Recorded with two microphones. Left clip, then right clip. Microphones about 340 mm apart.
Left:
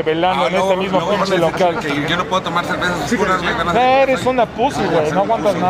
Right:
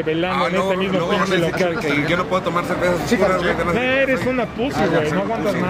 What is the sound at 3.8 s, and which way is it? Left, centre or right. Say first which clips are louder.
Speech: left 8 dB; centre.